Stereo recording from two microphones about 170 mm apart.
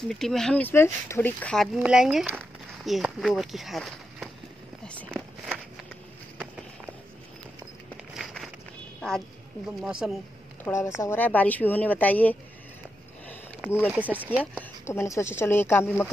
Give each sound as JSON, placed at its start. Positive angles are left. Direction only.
{"t": 0.1, "sound": "speech", "side_deg": 0}
{"t": 8.2, "sound": "walk", "side_deg": 0}
{"t": 9.0, "sound": "speech", "side_deg": 5}
{"t": 10.6, "sound": "speech", "side_deg": 15}
{"t": 13.7, "sound": "speech", "side_deg": 10}
{"t": 13.9, "sound": "speech", "side_deg": -10}
{"t": 14.4, "sound": "speech", "side_deg": 10}